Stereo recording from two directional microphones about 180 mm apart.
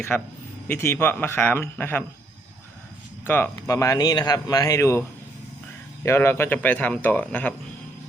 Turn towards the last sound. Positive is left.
turn(degrees=10)  # may be behind; listen again after turning